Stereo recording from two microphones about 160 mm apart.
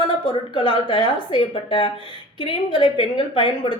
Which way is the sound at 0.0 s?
30° left (ahead or behind).